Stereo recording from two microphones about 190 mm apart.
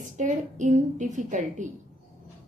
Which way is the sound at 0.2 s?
40° right (ahead or behind).